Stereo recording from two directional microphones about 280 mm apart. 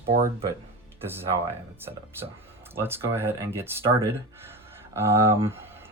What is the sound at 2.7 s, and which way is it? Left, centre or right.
Speech, centre.